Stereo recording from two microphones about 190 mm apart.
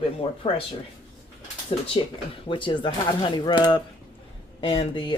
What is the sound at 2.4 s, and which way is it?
Speech, 25° left (ahead or behind).